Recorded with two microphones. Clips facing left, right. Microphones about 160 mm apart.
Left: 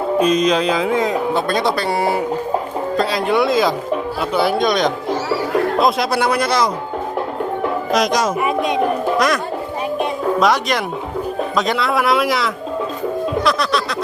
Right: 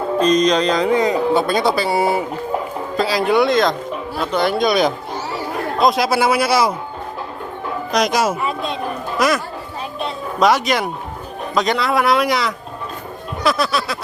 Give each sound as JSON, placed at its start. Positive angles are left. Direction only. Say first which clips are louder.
{"t": 0.2, "sound": "speech", "louder": "right 1 dB", "side_deg": 5}
{"t": 7.9, "sound": "speech", "louder": "right 1 dB", "side_deg": 0}
{"t": 8.4, "sound": "speech", "louder": "left 5 dB", "side_deg": 15}
{"t": 9.1, "sound": "speech", "louder": "right 3 dB", "side_deg": -5}
{"t": 10.4, "sound": "speech", "louder": "right 5 dB", "side_deg": 0}
{"t": 13.4, "sound": "music", "louder": "right 3 dB", "side_deg": -5}